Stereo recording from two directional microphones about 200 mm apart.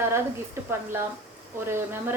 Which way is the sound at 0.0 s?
10° right (ahead or behind).